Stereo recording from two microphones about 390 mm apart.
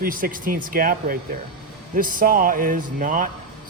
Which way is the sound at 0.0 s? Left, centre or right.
Right.